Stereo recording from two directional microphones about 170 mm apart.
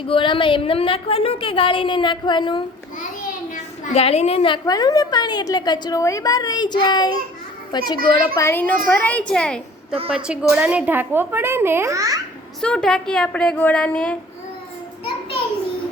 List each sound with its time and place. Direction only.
0.1 s a woman's voice: 30° left (ahead or behind)
3.5 s a woman's voice: 40° left (ahead or behind); by 7.2 s 25° left (ahead or behind)
7.9 s a child's voice: 60° right (ahead or behind)
8.4 s a woman's voice: 15° left (ahead or behind)
10.2 s a woman's voice: 5° right (ahead or behind)
12.6 s a woman's voice: 5° left (ahead or behind)